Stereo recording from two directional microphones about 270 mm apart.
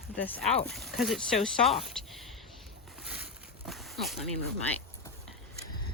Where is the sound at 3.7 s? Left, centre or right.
Centre.